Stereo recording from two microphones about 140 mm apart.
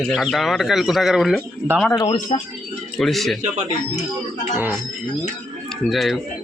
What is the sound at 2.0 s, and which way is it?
Speech, 30° left (ahead or behind).